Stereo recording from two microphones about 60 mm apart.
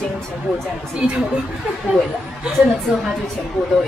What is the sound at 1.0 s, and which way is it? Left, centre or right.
Speech, centre.